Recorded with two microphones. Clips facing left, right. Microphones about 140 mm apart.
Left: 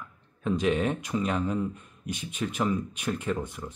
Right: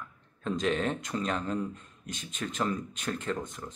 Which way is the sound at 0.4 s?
10° left (ahead or behind).